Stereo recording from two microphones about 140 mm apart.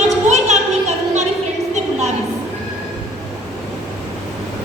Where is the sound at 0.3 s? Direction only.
55° right (ahead or behind).